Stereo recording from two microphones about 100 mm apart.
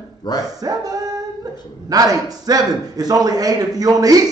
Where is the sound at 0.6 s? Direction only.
40° right (ahead or behind).